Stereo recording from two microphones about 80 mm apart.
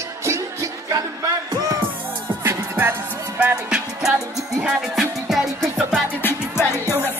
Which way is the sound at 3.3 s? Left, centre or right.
Centre.